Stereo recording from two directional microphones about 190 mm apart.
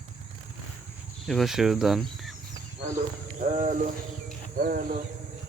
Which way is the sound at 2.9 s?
40° right (ahead or behind).